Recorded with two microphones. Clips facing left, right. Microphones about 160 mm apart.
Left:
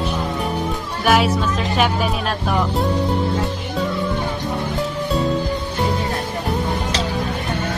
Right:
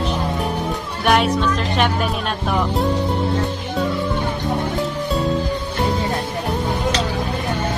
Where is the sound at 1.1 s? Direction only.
5° left (ahead or behind).